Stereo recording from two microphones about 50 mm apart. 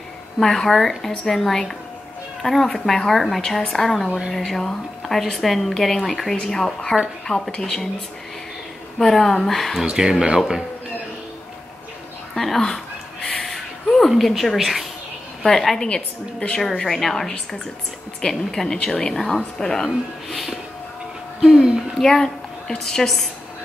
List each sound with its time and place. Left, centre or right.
0.4 s a woman's voice: centre
8.9 s a woman's voice: centre
9.8 s speech: centre
12.4 s a sound: centre
15.4 s a woman's voice: centre
15.9 s a woman's voice: centre
18.3 s a woman's voice: centre
22.0 s a woman's voice: centre